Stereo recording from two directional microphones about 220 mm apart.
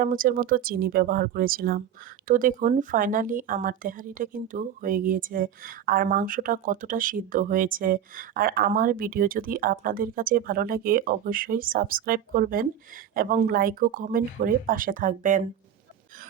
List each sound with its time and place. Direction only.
0.0 s speech: 40° right (ahead or behind)